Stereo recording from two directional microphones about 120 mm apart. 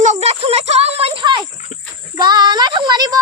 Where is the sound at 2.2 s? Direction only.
35° right (ahead or behind).